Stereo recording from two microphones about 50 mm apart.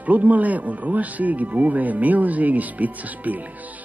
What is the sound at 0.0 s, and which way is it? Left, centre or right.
Speech, right.